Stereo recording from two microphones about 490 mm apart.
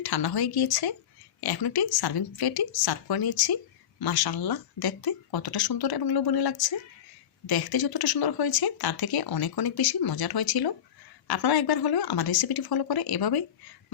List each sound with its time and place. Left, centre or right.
0.0 s speech: left